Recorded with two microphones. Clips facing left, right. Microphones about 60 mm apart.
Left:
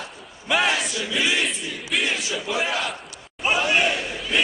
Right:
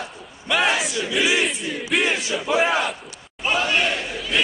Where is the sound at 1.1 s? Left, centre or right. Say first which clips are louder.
Right 3 dB; centre.